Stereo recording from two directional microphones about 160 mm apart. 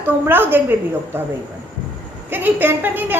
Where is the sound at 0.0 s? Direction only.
15° right (ahead or behind).